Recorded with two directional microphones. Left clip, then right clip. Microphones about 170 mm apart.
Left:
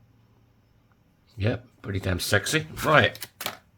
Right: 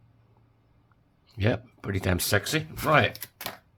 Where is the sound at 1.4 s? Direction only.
15° right (ahead or behind).